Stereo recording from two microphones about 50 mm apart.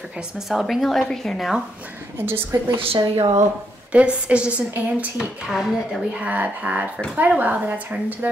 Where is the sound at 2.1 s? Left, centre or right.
Right.